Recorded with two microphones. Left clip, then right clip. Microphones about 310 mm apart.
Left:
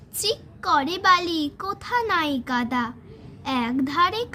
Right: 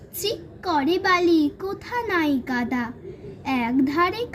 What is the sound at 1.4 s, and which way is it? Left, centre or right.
A child's voice, left.